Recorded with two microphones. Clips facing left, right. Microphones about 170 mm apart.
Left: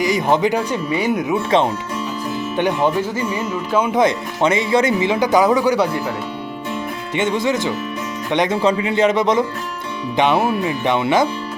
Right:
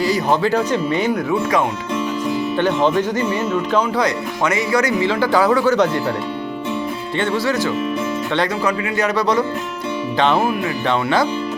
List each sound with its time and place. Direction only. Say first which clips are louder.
0.0 s speech: left 1 dB; 20° left (ahead or behind)
1.1 s speech: left 1 dB; 25° left (ahead or behind)
2.6 s speech: even; 10° left (ahead or behind)
3.8 s speech: left 3 dB; 20° left (ahead or behind)
7.2 s speech: left 1 dB; 20° left (ahead or behind)